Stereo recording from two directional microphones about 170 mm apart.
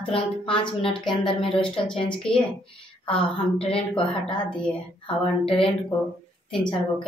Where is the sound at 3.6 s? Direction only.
30° left (ahead or behind).